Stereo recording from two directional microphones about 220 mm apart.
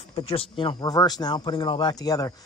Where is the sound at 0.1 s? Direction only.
25° left (ahead or behind).